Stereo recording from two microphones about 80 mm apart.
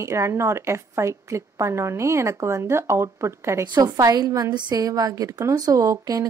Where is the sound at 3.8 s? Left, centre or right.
Right.